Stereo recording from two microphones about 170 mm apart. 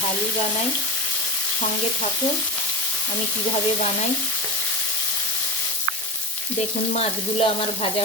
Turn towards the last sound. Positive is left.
turn(degrees=35)  # may be behind; listen again after turning